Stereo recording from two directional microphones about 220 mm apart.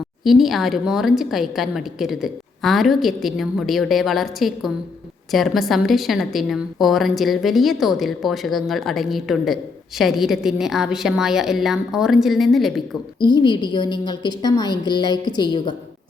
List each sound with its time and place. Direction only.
0.3 s a woman's voice: centre (ahead or behind)
13.1 s a woman's voice: 20° left (ahead or behind)